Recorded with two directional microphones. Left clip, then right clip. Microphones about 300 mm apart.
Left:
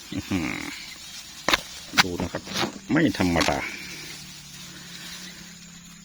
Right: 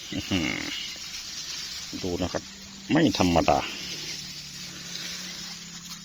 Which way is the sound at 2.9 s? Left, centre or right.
Centre.